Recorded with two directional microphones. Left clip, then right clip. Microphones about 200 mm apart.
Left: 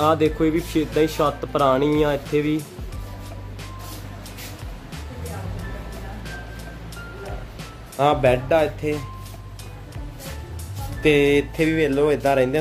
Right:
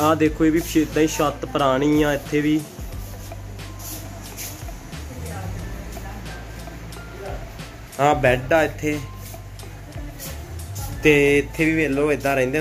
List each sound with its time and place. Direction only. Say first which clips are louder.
0.0 s speech: even; 10° left (ahead or behind)
8.0 s speech: even; 5° left (ahead or behind)
11.0 s speech: right 1 dB; 5° left (ahead or behind)